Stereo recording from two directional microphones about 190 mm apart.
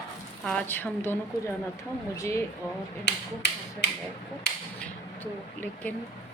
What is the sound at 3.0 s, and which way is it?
Finger snapping, 60° left (ahead or behind).